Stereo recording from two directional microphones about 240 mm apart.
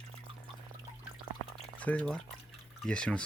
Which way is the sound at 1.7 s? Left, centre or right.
Centre.